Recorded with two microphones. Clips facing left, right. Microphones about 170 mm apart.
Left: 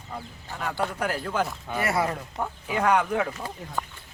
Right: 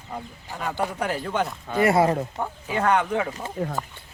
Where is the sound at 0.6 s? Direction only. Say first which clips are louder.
Right 2 dB; 10° right (ahead or behind).